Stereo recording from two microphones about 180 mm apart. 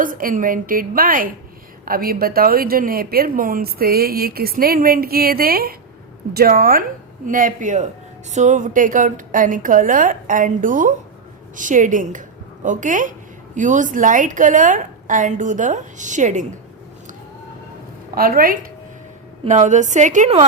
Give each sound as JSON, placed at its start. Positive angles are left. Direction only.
{"t": 0.0, "sound": "a woman's voice", "side_deg": -50}
{"t": 18.1, "sound": "a woman's voice", "side_deg": -55}
{"t": 19.5, "sound": "a woman's voice", "side_deg": -40}